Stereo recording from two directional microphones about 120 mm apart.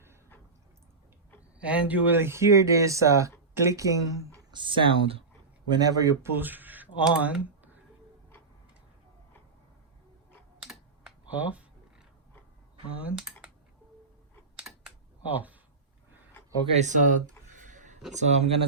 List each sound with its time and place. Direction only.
1.5 s speech: 10° right (ahead or behind); by 4.4 s 25° right (ahead or behind)
4.5 s speech: 45° right (ahead or behind)
5.6 s speech: 35° right (ahead or behind)
6.4 s speech: 15° right (ahead or behind)
10.6 s computer keyboard: 5° right (ahead or behind)
13.0 s speech: 10° right (ahead or behind)
14.5 s typing: 5° right (ahead or behind)
16.7 s a sound: 85° right
18.1 s speech: 75° right (ahead or behind)